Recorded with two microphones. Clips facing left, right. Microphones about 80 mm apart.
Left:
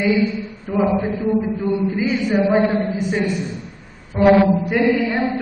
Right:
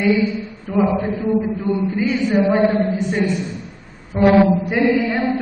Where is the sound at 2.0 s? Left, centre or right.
Centre.